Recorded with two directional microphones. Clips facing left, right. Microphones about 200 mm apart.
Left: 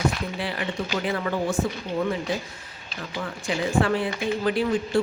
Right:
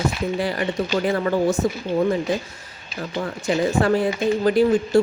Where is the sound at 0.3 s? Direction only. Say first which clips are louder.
Right 6 dB; 45° right (ahead or behind).